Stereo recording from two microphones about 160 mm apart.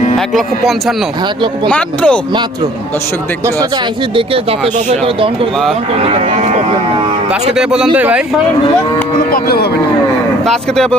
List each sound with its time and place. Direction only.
0.3 s speech: centre (ahead or behind)
4.9 s speech: 35° right (ahead or behind)
7.5 s speech: 5° right (ahead or behind)
9.3 s speech: 75° left (ahead or behind)
10.4 s speech: centre (ahead or behind)